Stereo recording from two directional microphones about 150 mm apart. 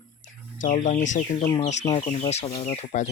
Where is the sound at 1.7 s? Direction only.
50° left (ahead or behind).